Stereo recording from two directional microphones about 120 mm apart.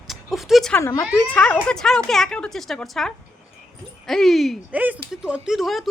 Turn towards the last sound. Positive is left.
turn(degrees=0)  # may be behind; listen again after turning